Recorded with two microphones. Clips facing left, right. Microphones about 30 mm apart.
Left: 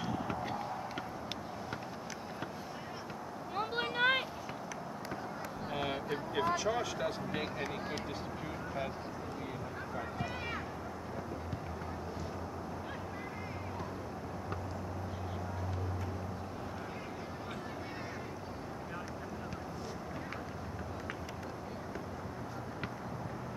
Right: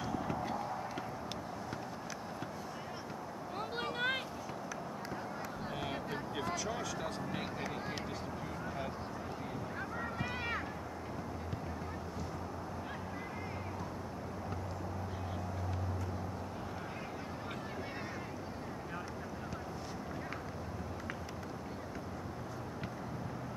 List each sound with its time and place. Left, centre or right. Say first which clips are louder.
0.3 s a sound: even; centre
3.5 s vehicle: left 5 dB; centre
5.7 s vehicle: left 5 dB; centre
6.3 s speech: left 7 dB; centre
10.1 s run: right 2 dB; centre